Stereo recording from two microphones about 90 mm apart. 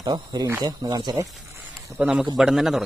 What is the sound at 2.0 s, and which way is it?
Speech, 10° right (ahead or behind).